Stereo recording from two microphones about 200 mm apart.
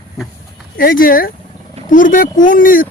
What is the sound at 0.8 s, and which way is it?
Speech, 45° left (ahead or behind).